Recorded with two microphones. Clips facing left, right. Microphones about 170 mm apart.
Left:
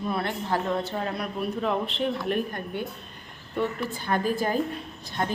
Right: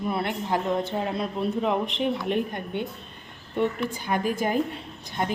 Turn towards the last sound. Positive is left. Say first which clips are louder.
# right 1 dB
turn(degrees=-20)  # may be behind; listen again after turning